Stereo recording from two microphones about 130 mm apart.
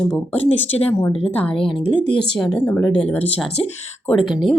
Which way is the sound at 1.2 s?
45° left (ahead or behind).